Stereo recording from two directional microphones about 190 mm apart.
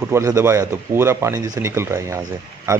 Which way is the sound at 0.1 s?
15° right (ahead or behind).